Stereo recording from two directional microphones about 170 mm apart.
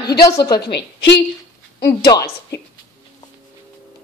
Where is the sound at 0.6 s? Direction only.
80° left.